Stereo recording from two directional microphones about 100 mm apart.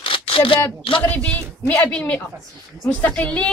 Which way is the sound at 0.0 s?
60° left (ahead or behind).